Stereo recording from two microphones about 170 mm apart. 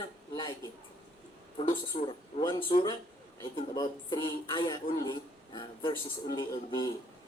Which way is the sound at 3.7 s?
25° left (ahead or behind).